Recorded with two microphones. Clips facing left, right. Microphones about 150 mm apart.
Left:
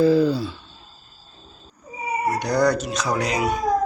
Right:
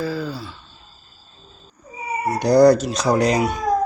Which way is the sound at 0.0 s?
20° left (ahead or behind).